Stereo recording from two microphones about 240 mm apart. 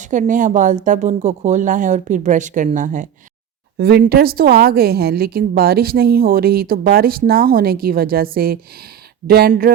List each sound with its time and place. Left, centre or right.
0.0 s a woman's voice: right